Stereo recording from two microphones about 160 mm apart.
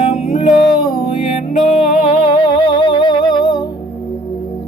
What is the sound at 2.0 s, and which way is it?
Music, 30° left (ahead or behind).